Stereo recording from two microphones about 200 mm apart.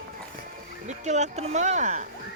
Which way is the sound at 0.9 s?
35° right (ahead or behind).